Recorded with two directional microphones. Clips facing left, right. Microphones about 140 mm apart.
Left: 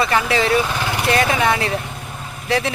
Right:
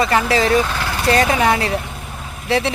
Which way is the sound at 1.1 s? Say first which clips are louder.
Right 3 dB; 35° right (ahead or behind).